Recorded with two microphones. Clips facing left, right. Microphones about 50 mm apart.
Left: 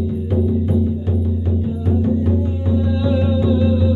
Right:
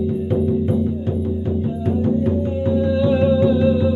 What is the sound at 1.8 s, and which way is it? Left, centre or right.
Music, right.